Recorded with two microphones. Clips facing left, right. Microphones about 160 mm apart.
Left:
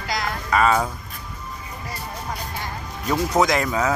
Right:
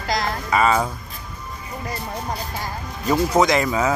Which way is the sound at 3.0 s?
5° right (ahead or behind).